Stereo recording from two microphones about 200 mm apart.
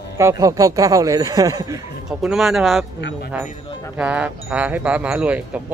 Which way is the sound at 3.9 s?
5° right (ahead or behind).